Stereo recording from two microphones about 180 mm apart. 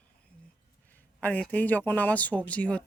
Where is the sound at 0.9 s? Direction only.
10° left (ahead or behind).